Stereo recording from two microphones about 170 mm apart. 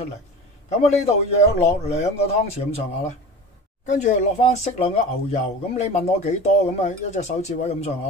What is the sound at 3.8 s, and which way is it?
Speech, 45° left (ahead or behind).